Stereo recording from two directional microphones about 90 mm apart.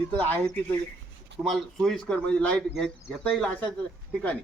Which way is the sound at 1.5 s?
Centre (ahead or behind).